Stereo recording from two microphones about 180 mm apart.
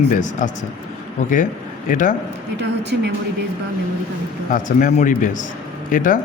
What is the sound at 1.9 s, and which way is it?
Speech, 45° left (ahead or behind).